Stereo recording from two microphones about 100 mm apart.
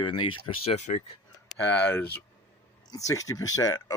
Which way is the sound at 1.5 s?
20° left (ahead or behind).